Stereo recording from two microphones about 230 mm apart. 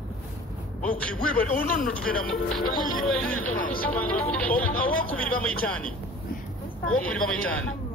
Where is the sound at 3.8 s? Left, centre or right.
Centre.